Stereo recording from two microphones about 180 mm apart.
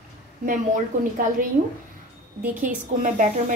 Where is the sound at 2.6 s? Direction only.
45° right (ahead or behind).